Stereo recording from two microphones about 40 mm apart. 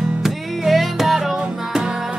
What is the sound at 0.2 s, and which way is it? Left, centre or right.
Music, centre.